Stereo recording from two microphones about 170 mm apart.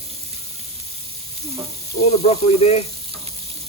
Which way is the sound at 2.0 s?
40° left (ahead or behind).